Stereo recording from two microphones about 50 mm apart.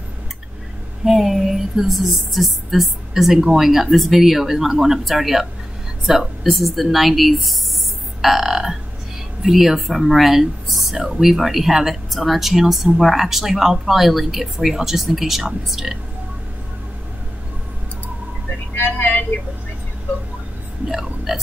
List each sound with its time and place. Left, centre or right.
1.0 s speech: centre
8.2 s music: centre
9.4 s speech: centre
18.8 s vehicle: left
20.9 s burping: centre